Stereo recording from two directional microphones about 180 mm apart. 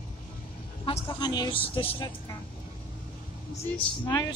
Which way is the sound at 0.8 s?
25° left (ahead or behind).